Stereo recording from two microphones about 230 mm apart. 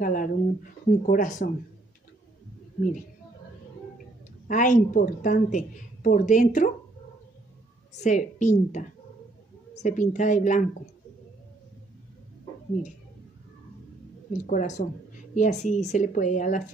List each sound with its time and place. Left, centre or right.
0.0 s a woman's voice: left
4.5 s a woman's voice: left
7.9 s a woman's voice: left
14.4 s a woman's voice: left